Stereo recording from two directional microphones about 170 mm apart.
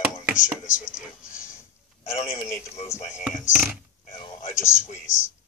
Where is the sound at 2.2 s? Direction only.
15° left (ahead or behind).